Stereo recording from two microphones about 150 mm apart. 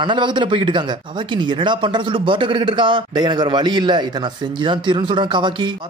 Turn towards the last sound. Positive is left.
turn(degrees=-30)  # may be behind; listen again after turning